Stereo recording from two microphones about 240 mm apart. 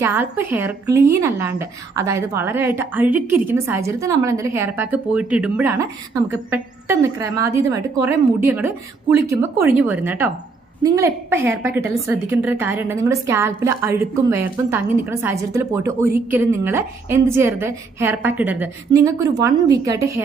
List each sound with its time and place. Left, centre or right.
0.0 s a woman's voice: centre